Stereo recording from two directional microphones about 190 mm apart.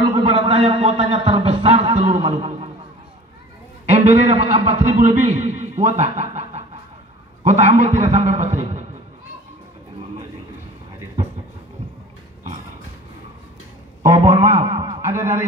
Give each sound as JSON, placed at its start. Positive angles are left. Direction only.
{"t": 0.1, "sound": "a man's voice", "side_deg": -30}
{"t": 3.8, "sound": "a man's voice", "side_deg": -35}
{"t": 14.2, "sound": "a man's voice", "side_deg": -15}
{"t": 15.0, "sound": "a sound", "side_deg": -15}